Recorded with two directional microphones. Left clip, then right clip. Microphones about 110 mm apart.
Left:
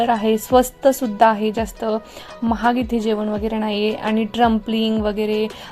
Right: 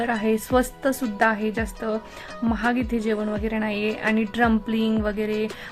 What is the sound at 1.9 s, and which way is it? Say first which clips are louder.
Speech: left 5 dB; 25° right (ahead or behind).